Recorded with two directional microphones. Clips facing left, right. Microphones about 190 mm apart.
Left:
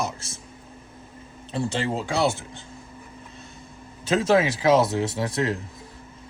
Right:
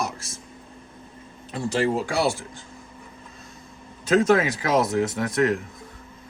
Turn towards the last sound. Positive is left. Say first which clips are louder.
# right 3 dB
turn(degrees=30)  # may be behind; listen again after turning